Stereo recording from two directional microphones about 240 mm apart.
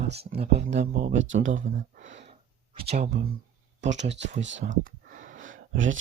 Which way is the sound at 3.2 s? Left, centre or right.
Right.